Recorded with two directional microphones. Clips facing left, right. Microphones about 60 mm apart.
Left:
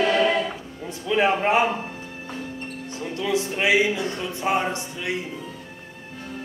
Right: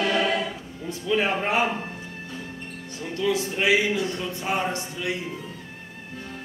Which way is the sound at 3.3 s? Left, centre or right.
Left.